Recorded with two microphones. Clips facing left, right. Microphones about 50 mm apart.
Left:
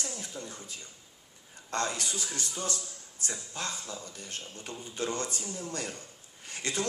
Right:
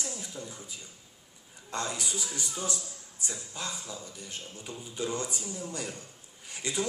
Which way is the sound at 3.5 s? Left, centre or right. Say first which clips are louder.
Left 1 dB; centre.